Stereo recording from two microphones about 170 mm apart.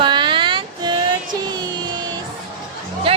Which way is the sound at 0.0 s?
25° right (ahead or behind).